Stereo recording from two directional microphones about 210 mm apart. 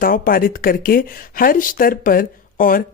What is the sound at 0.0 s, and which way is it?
A woman's voice, 45° left (ahead or behind).